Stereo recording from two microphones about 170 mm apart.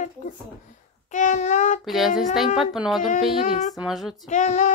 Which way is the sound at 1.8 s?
Centre (ahead or behind).